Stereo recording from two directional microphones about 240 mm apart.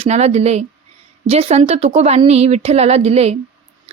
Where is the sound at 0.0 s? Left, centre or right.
Right.